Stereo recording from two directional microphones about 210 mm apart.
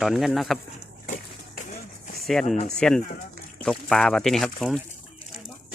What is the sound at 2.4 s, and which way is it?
Speech, 35° left (ahead or behind).